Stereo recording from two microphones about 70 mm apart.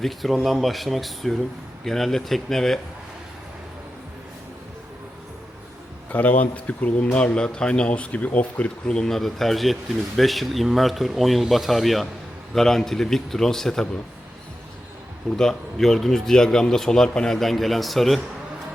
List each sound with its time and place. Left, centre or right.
0.0 s a man's voice: centre
6.1 s a man's voice: left; by 13.8 s centre
15.4 s a man's voice: centre